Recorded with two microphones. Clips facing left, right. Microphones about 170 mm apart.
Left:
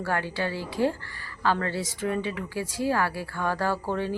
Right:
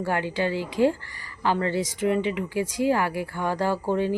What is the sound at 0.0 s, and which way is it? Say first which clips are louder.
A woman's voice: right 3 dB; 15° right (ahead or behind).